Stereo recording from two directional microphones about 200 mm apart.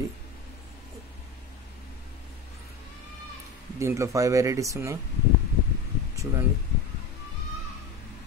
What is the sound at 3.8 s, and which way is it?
Speech, 15° right (ahead or behind).